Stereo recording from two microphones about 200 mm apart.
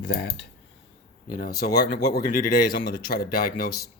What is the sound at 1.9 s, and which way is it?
Speech, 50° left (ahead or behind).